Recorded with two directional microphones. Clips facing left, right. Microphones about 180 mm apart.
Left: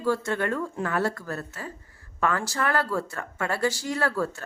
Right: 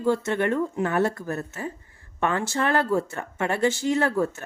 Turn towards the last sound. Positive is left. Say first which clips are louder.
# right 4 dB
turn(degrees=-20)  # may be behind; listen again after turning